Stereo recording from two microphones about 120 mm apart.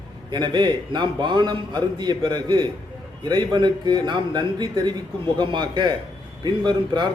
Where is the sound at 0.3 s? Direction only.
40° right (ahead or behind).